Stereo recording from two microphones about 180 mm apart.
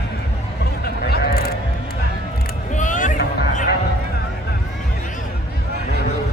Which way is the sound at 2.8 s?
45° left (ahead or behind).